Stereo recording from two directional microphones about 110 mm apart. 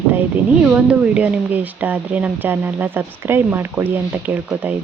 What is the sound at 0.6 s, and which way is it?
A woman's voice, 10° right (ahead or behind).